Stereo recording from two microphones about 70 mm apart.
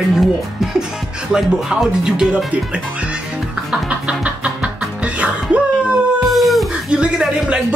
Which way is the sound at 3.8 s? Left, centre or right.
Centre.